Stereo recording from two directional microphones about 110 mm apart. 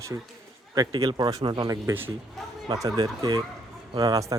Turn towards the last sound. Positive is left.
turn(degrees=-30)  # may be behind; listen again after turning